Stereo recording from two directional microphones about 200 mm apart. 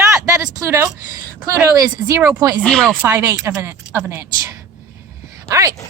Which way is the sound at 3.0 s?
10° right (ahead or behind).